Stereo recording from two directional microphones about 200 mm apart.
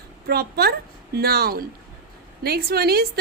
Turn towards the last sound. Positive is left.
turn(degrees=-50)  # may be behind; listen again after turning